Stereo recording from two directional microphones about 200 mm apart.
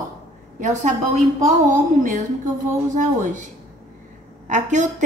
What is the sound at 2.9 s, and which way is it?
Speech, 40° right (ahead or behind).